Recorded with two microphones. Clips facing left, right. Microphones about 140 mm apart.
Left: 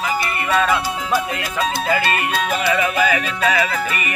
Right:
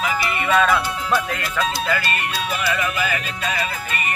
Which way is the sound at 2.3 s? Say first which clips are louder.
Left 4 dB; 55° left (ahead or behind).